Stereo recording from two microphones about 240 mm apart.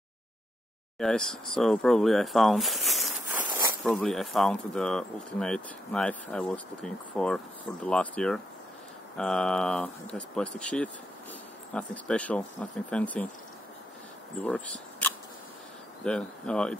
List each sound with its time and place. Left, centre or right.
0.9 s speech: centre
3.4 s zipper: centre
3.8 s speech: centre
14.4 s speech: centre